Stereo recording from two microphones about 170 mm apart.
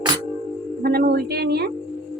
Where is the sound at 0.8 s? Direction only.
65° right (ahead or behind).